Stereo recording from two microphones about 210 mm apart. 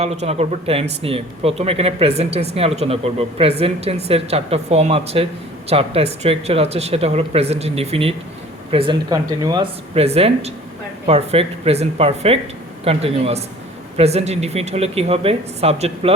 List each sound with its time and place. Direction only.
0.0 s speech: 30° right (ahead or behind)